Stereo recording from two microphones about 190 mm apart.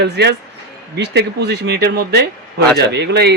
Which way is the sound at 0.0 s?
60° right (ahead or behind).